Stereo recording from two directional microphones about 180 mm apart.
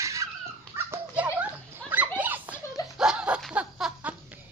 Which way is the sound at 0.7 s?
10° right (ahead or behind).